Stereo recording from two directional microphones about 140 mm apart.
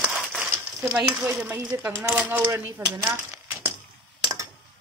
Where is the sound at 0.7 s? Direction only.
20° right (ahead or behind).